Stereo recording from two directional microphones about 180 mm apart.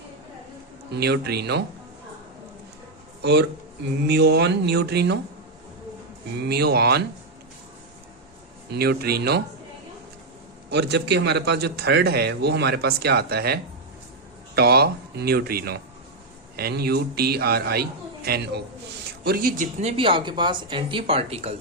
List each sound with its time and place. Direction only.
0.9 s a man's voice: 65° right (ahead or behind)
3.2 s a man's voice: 70° right (ahead or behind)
6.5 s a man's voice: 65° right (ahead or behind)
8.7 s a man's voice: 60° right (ahead or behind)
10.7 s a man's voice: 70° right (ahead or behind); by 19.6 s 55° right (ahead or behind)
19.8 s speech: 30° right (ahead or behind)